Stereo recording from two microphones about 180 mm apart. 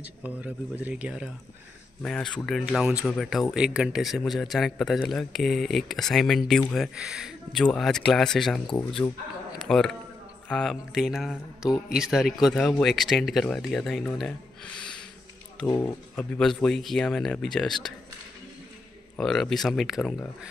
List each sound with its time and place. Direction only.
0.0 s speech: 10° right (ahead or behind)
2.0 s speech: 5° left (ahead or behind)
15.6 s speech: 15° left (ahead or behind)
16.2 s speech: 5° left (ahead or behind)
19.1 s speech: 5° left (ahead or behind)